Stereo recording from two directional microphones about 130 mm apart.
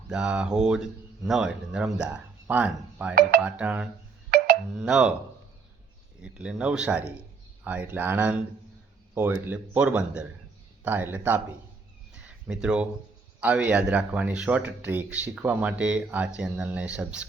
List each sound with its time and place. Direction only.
0.1 s speech: 10° right (ahead or behind)
6.2 s speech: 10° right (ahead or behind)
12.2 s a sound: 10° right (ahead or behind)
13.4 s speech: 10° right (ahead or behind)